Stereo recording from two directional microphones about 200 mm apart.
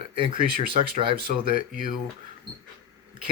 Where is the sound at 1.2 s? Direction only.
45° right (ahead or behind).